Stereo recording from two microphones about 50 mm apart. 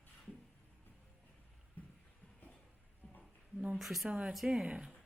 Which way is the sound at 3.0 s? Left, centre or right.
Centre.